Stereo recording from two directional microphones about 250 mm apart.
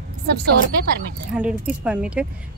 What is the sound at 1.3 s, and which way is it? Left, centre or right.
Speech, centre.